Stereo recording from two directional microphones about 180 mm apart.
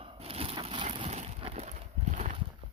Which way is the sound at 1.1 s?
35° right (ahead or behind).